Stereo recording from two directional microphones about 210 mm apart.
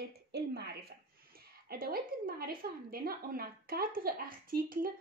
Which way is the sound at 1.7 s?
45° right (ahead or behind).